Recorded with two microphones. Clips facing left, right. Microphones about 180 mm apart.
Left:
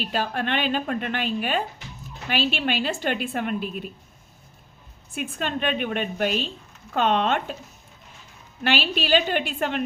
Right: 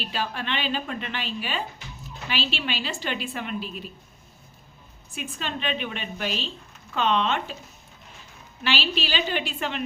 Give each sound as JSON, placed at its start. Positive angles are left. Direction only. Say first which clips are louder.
{"t": 0.0, "sound": "a woman's voice", "louder": "left 4 dB", "side_deg": 50}
{"t": 5.1, "sound": "a woman's voice", "louder": "left 5 dB", "side_deg": 55}
{"t": 8.6, "sound": "a woman's voice", "louder": "left 3 dB", "side_deg": 50}